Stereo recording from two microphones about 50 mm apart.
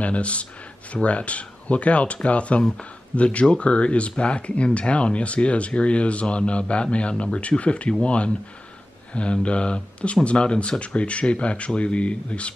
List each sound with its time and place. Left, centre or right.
0.0 s speech: left